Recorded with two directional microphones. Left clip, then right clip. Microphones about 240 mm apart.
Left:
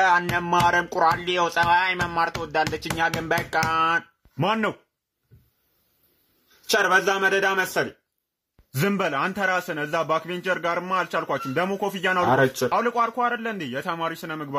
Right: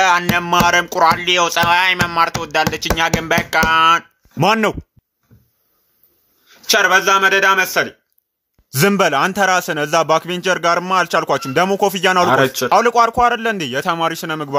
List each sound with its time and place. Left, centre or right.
0.0 s speech: centre
4.4 s a man's voice: right
6.6 s speech: centre
8.7 s a man's voice: right
12.3 s speech: centre
12.6 s a man's voice: right